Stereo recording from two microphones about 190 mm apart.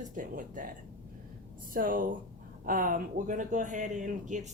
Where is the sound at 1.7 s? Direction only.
45° right (ahead or behind).